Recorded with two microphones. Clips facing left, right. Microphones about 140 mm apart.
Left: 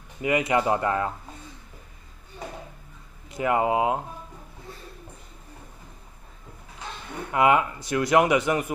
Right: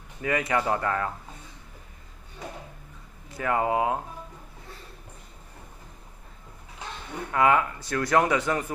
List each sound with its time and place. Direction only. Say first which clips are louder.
0.2 s speech: left 3 dB; 15° left (ahead or behind)
3.3 s speech: left 3 dB; 20° left (ahead or behind)
7.3 s speech: left 2 dB; 20° left (ahead or behind)